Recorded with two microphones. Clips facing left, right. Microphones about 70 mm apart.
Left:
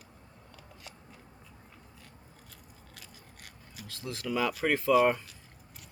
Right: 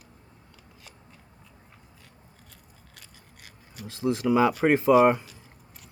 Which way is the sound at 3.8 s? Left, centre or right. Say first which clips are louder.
Right 12 dB; right.